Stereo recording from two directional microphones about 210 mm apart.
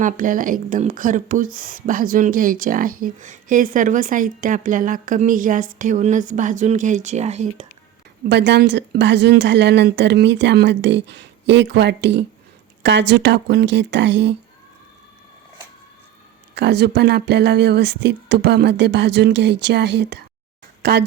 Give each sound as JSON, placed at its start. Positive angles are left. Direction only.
{"t": 0.0, "sound": "speech", "side_deg": -40}
{"t": 8.3, "sound": "speech", "side_deg": -55}
{"t": 16.6, "sound": "a woman's voice", "side_deg": -55}